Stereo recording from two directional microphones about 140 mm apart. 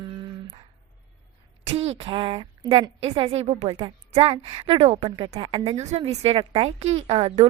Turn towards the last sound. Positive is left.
turn(degrees=-45)  # may be behind; listen again after turning